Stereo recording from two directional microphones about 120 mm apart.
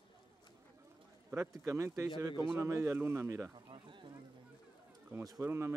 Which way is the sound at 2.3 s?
40° left (ahead or behind).